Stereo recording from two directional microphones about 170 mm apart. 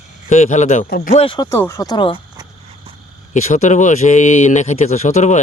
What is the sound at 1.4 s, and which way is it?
Speech, 15° left (ahead or behind).